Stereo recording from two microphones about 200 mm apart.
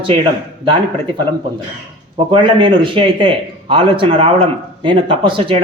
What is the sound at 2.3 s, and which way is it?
A man's voice, 25° right (ahead or behind).